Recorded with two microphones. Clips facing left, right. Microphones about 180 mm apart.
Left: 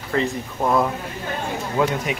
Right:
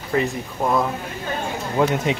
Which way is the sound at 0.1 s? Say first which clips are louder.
Right 1 dB; 20° right (ahead or behind).